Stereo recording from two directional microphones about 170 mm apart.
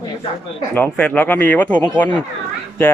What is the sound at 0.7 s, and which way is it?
Speech, 10° left (ahead or behind).